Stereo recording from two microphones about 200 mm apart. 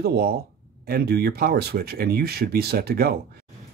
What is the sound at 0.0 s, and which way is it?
Speech, 50° right (ahead or behind).